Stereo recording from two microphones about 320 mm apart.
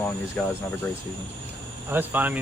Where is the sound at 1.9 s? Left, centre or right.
Centre.